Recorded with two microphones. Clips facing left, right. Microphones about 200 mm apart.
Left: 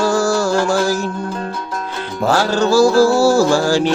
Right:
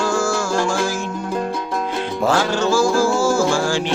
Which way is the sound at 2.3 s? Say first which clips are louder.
Left 4 dB; 40° left (ahead or behind).